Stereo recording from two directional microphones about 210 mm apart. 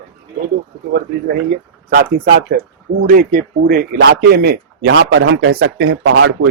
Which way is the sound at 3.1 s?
40° right (ahead or behind).